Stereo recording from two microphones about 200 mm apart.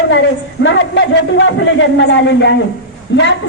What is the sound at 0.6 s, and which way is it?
Speech, 65° left (ahead or behind).